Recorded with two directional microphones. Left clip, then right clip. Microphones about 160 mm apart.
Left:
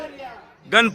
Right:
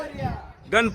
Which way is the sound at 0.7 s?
5° right (ahead or behind).